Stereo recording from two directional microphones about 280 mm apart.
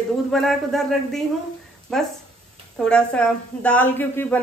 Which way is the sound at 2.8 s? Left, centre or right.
Centre.